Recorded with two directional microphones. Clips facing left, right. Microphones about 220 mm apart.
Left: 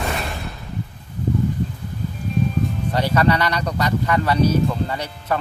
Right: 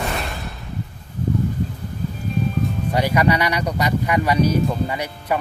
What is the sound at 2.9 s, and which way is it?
Speech, 10° right (ahead or behind).